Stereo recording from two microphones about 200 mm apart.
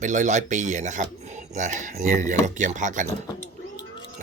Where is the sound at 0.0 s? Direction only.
35° right (ahead or behind).